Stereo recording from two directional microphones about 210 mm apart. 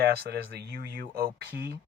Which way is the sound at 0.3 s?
50° right (ahead or behind).